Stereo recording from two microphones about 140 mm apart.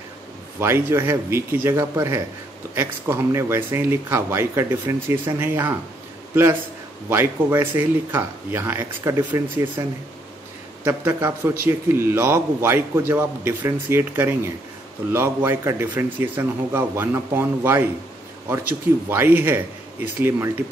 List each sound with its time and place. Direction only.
0.6 s speech: 15° right (ahead or behind)
7.1 s speech: 15° right (ahead or behind)